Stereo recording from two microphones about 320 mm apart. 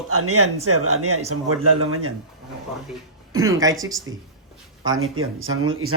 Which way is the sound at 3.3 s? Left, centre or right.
Centre.